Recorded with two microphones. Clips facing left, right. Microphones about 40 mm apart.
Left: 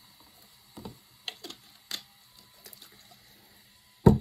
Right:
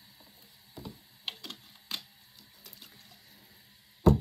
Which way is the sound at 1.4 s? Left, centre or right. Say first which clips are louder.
Even; right.